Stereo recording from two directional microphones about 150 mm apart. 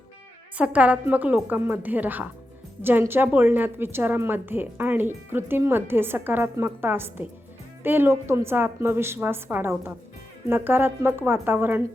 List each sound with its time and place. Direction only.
0.5 s a woman's voice: 10° right (ahead or behind)